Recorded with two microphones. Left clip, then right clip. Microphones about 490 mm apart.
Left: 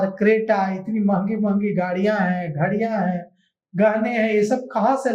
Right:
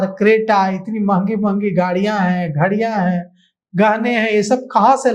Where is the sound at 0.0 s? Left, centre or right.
Right.